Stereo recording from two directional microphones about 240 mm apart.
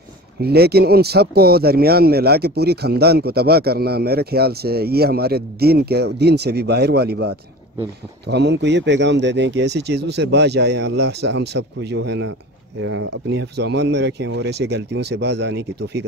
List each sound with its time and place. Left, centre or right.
0.4 s speech: right